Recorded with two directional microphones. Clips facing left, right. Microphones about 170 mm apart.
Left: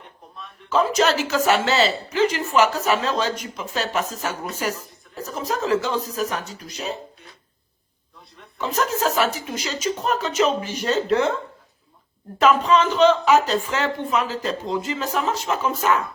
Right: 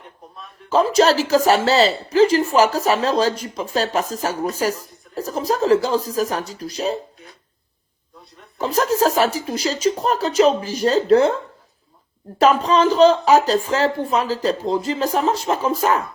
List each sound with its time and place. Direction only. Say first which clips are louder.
0.7 s speech: right 4 dB; 35° right (ahead or behind)
8.5 s speech: right 5 dB; 35° right (ahead or behind)
12.4 s speech: right 2 dB; 35° right (ahead or behind)